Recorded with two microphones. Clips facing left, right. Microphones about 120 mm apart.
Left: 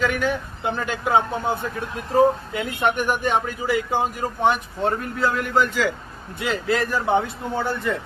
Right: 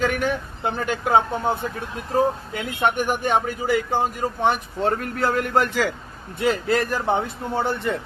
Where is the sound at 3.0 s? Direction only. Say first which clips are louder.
Even; 50° right (ahead or behind).